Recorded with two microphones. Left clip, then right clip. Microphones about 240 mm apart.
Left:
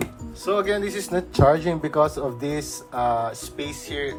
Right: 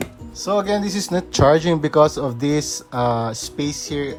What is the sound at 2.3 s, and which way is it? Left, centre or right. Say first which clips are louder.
Speech: right 7 dB; right.